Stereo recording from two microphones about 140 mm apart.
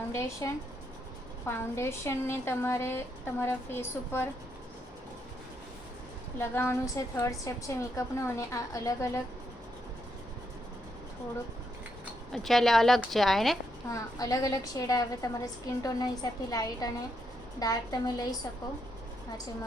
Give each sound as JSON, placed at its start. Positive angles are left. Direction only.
{"t": 0.1, "sound": "a woman's voice", "side_deg": 20}
{"t": 6.4, "sound": "a woman's voice", "side_deg": 15}
{"t": 12.3, "sound": "speech", "side_deg": 0}
{"t": 13.9, "sound": "a woman's voice", "side_deg": 25}